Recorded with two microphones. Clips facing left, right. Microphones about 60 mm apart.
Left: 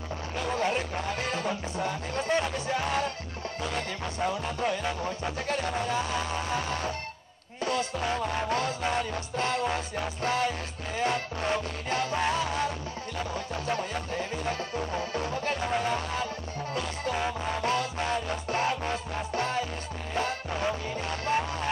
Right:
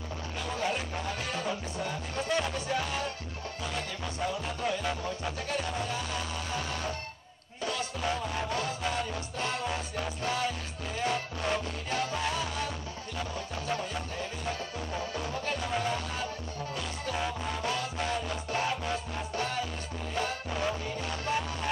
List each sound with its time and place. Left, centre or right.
0.5 s music: left
5.5 s music: left
8.5 s music: left
11.0 s music: left
13.7 s music: left
17.1 s music: left
20.2 s music: left